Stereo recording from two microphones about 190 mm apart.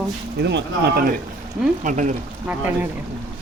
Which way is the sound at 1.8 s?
40° right (ahead or behind).